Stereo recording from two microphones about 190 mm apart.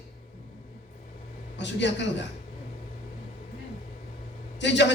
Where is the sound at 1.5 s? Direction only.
65° left (ahead or behind).